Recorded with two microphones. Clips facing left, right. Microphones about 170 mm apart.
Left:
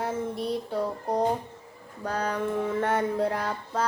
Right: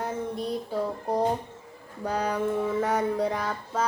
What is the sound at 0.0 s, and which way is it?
Child singing, centre (ahead or behind).